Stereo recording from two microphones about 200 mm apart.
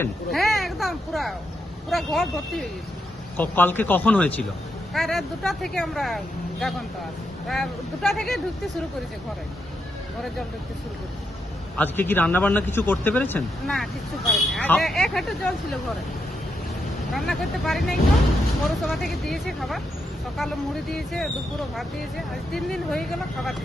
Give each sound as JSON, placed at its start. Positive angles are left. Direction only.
{"t": 0.3, "sound": "speech", "side_deg": 0}
{"t": 11.8, "sound": "speech", "side_deg": 10}
{"t": 17.1, "sound": "speech", "side_deg": 0}
{"t": 22.5, "sound": "speech", "side_deg": 0}